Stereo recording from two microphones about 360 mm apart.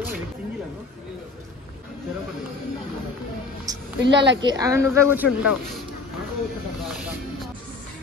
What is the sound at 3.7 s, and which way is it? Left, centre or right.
Music, centre.